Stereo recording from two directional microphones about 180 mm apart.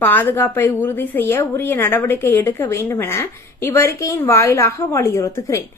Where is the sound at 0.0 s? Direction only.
10° left (ahead or behind).